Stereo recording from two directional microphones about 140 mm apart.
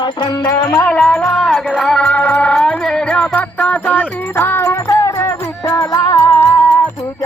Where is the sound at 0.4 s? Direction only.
15° left (ahead or behind).